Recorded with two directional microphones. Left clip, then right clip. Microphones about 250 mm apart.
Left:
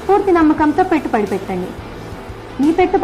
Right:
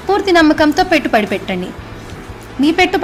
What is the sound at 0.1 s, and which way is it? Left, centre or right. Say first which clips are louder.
A woman's voice: right 1 dB; right.